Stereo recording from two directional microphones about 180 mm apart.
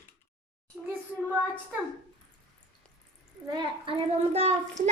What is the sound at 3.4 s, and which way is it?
A child's voice, 25° right (ahead or behind).